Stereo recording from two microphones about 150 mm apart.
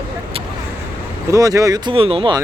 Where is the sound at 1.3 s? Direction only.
20° right (ahead or behind).